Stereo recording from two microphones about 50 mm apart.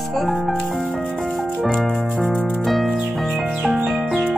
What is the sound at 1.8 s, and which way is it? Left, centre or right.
Music, centre.